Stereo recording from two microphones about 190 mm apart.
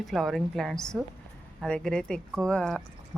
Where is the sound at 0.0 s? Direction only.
Centre (ahead or behind).